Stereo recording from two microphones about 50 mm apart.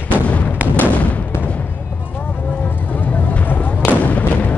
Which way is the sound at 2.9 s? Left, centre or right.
Left.